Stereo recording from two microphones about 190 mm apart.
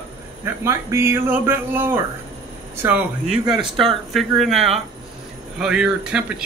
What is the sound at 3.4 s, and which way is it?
Speech, 20° right (ahead or behind).